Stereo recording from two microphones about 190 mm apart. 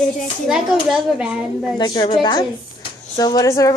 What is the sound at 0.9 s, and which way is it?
Speech, 5° right (ahead or behind).